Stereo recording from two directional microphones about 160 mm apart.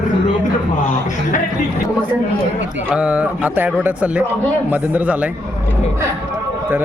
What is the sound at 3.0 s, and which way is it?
Speech, 10° right (ahead or behind).